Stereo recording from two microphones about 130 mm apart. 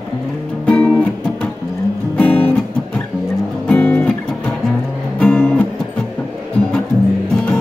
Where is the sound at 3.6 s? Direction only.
10° left (ahead or behind).